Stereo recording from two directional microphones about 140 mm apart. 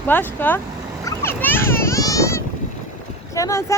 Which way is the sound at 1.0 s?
15° left (ahead or behind).